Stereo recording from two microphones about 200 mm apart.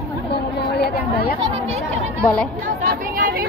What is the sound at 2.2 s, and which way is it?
Speech, 10° left (ahead or behind).